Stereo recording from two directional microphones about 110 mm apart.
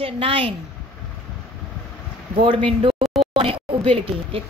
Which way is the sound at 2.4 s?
55° right (ahead or behind).